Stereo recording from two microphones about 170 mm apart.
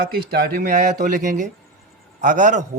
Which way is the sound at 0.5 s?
55° right (ahead or behind).